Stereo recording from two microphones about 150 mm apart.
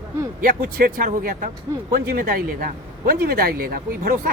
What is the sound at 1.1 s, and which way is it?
Speech, 60° right (ahead or behind).